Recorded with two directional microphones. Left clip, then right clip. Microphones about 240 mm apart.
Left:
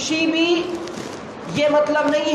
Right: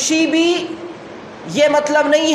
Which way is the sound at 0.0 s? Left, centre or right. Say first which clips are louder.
Right 4 dB; right.